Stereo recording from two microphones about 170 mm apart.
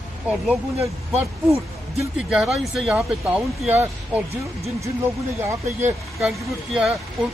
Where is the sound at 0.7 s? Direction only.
35° right (ahead or behind).